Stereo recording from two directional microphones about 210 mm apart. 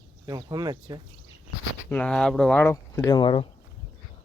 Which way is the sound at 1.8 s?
5° left (ahead or behind).